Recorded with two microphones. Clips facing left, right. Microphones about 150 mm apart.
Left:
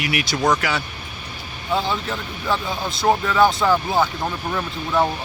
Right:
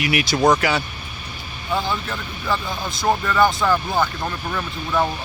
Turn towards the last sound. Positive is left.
turn(degrees=10)  # may be behind; listen again after turning